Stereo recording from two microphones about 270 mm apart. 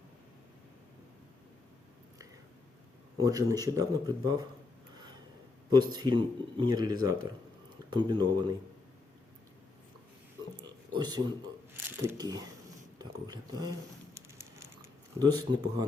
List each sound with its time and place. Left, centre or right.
3.2 s speech: centre
5.7 s speech: centre
10.6 s a sound: centre
11.9 s speech: centre
13.0 s a sound: centre
15.2 s speech: centre